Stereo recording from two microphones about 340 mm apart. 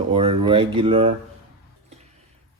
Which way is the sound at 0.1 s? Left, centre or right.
Centre.